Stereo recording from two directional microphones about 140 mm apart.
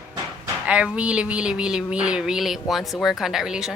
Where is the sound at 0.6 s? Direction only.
10° right (ahead or behind).